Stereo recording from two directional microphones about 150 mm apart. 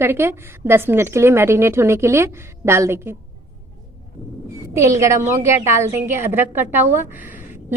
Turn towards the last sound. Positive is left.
turn(degrees=-15)  # may be behind; listen again after turning